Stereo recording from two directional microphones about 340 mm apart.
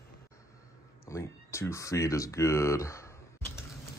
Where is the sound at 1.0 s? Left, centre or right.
Centre.